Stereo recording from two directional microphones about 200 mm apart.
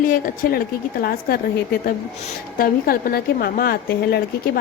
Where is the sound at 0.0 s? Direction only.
45° left (ahead or behind).